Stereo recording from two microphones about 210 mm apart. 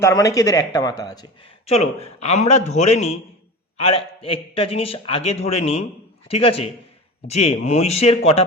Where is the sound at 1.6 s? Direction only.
30° left (ahead or behind).